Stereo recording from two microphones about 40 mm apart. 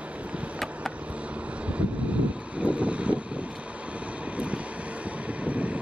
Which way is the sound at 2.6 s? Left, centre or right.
Right.